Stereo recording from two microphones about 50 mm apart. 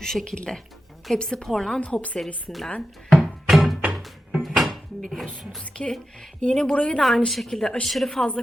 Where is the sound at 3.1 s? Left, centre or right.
Centre.